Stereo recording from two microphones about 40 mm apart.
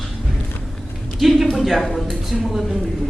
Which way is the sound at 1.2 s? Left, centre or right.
Centre.